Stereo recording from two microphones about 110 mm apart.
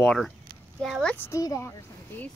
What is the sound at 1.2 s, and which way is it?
Speech, 25° left (ahead or behind).